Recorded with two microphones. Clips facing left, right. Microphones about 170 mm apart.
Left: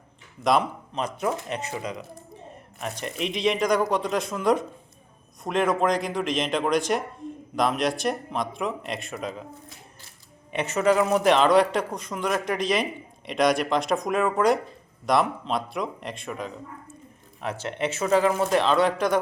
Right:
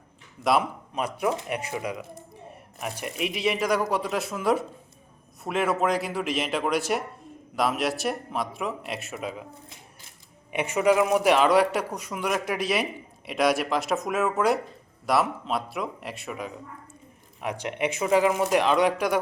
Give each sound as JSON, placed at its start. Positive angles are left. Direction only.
{"t": 0.4, "sound": "a man's voice", "side_deg": -5}
{"t": 10.5, "sound": "a man's voice", "side_deg": -10}